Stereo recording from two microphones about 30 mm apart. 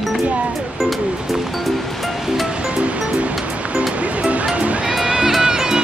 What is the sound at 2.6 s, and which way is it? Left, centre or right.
Music, right.